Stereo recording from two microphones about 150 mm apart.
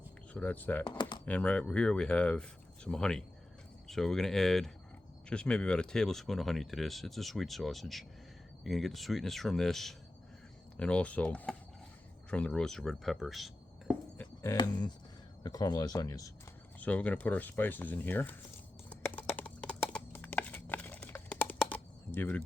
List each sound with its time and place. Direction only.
0.3 s speech: 10° left (ahead or behind)
0.9 s speech: 30° left (ahead or behind)
1.2 s speech: 10° left (ahead or behind)
14.5 s speech: 30° left (ahead or behind)
16.8 s speech: 10° left (ahead or behind)
18.9 s a sound: 15° left (ahead or behind)
21.7 s computer keyboard: 10° left (ahead or behind)